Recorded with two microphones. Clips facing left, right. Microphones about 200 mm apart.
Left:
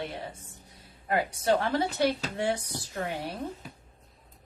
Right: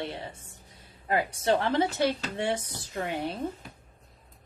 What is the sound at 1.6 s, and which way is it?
Speech, 20° right (ahead or behind).